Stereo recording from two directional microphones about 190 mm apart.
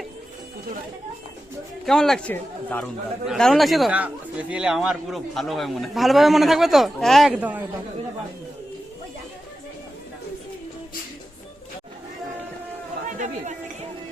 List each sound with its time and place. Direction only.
1.8 s speech: centre (ahead or behind)
13.1 s chatter: 40° right (ahead or behind)